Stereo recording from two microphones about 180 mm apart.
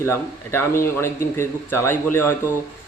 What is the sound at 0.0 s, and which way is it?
Speech, 15° left (ahead or behind).